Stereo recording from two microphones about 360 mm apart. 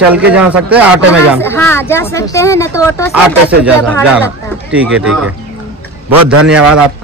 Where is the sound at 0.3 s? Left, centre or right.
Centre.